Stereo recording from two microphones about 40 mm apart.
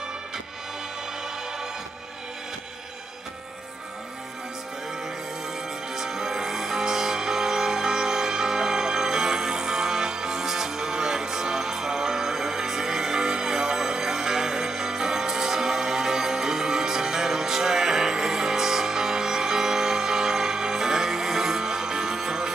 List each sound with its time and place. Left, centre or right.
5.9 s music: centre